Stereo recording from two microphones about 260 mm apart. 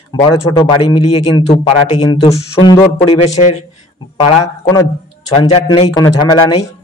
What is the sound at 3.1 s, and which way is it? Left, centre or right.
Speech, left.